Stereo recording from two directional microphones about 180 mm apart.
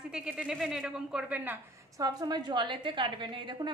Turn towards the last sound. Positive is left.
turn(degrees=-25)  # may be behind; listen again after turning